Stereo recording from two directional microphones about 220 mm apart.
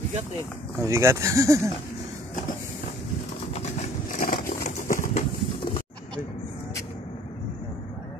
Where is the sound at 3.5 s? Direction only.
35° left (ahead or behind).